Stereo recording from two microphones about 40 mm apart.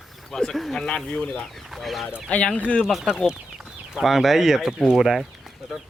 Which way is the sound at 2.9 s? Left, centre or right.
Centre.